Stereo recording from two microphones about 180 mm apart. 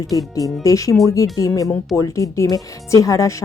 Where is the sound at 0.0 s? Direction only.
20° left (ahead or behind).